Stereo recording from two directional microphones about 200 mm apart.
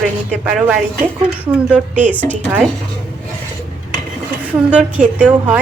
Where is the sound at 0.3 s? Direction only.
5° right (ahead or behind).